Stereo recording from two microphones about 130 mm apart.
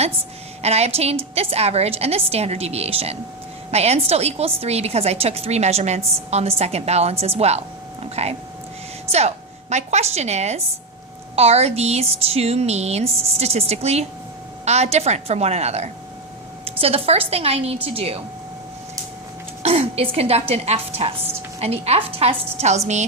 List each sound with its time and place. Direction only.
0.6 s a woman's voice: 55° right (ahead or behind)
19.6 s a woman's voice: 50° right (ahead or behind)